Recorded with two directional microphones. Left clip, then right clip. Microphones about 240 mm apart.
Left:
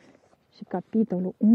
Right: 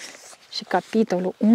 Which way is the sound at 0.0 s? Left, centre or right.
Centre.